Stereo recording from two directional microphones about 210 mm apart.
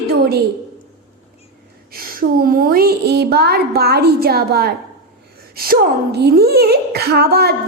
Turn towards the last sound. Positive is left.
turn(degrees=-50)  # may be behind; listen again after turning